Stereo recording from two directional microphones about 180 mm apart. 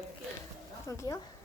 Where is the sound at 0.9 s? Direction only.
20° left (ahead or behind).